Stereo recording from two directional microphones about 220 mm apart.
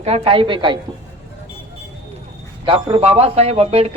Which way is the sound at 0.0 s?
25° right (ahead or behind).